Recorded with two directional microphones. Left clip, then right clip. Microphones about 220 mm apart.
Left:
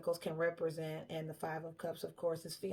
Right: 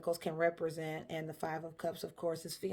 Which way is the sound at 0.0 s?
40° right (ahead or behind).